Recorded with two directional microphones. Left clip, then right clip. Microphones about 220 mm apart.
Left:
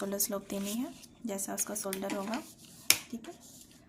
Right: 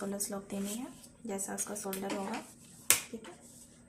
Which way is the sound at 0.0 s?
55° left (ahead or behind).